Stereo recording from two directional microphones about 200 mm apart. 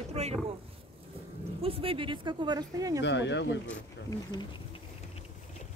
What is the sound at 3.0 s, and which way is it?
Speech, 60° left (ahead or behind).